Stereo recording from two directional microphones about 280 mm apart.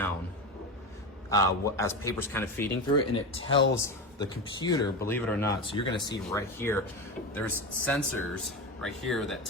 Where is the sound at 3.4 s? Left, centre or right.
Left.